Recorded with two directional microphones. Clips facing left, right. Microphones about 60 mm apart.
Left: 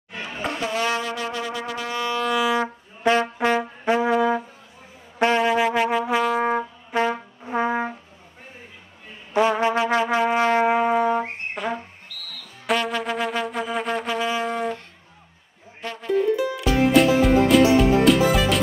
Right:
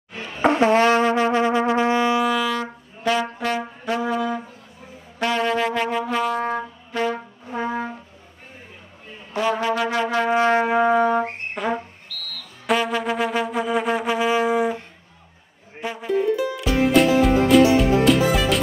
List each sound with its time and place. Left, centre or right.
0.4 s music: right
2.3 s brass instrument: centre
5.4 s music: centre
6.9 s brass instrument: left
9.6 s music: left
11.6 s music: centre
12.1 s music: centre
12.6 s music: centre
15.8 s music: centre
16.6 s music: centre